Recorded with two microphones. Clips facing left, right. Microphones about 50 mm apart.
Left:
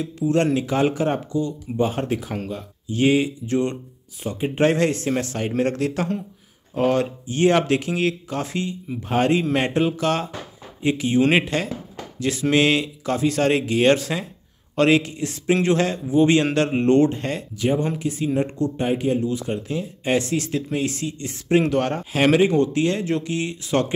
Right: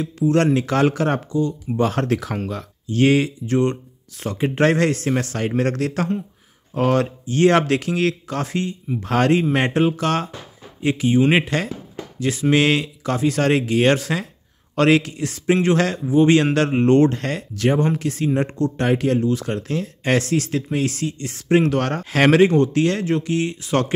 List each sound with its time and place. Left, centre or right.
0.2 s speech: right
0.6 s speech: right
1.8 s speech: right
2.9 s speech: right
4.2 s speech: right
9.0 s speech: right
9.3 s speech: right
11.1 s speech: centre
11.4 s speech: right
17.1 s speech: right
20.2 s speech: right